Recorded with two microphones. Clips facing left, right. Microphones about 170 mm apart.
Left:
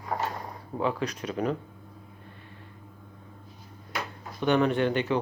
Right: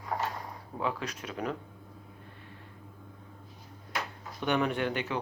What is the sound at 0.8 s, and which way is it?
Speech, 5° right (ahead or behind).